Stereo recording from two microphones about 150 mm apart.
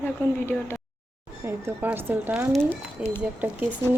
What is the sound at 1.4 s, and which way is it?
Speech, 15° right (ahead or behind).